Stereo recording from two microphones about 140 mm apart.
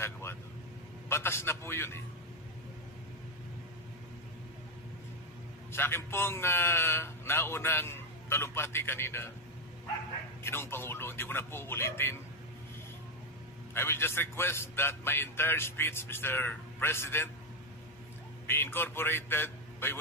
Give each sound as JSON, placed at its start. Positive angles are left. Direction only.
{"t": 0.0, "sound": "vehicle", "side_deg": 20}
{"t": 1.0, "sound": "a man's voice", "side_deg": 15}
{"t": 5.7, "sound": "a man's voice", "side_deg": 15}
{"t": 10.4, "sound": "a man's voice", "side_deg": 15}
{"t": 13.7, "sound": "a man's voice", "side_deg": 15}
{"t": 18.5, "sound": "a man's voice", "side_deg": 15}